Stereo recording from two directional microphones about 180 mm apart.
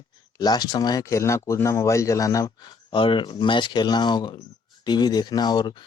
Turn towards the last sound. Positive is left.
turn(degrees=25)  # may be behind; listen again after turning